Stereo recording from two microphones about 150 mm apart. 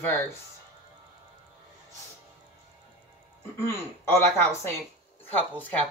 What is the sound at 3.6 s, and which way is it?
Speech, 15° left (ahead or behind).